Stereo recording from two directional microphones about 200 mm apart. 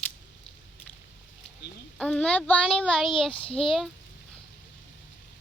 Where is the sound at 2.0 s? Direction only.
5° left (ahead or behind).